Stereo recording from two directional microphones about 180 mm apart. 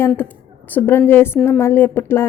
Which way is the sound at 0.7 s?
10° left (ahead or behind).